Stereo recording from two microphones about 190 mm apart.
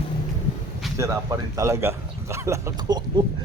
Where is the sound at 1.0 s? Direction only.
15° right (ahead or behind).